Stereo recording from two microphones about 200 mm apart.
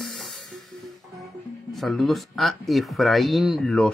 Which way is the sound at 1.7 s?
Centre (ahead or behind).